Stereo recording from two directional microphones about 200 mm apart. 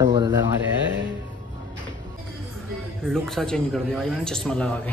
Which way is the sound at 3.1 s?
Centre (ahead or behind).